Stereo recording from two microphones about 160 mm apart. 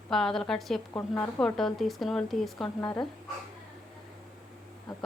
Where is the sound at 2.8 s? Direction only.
25° left (ahead or behind).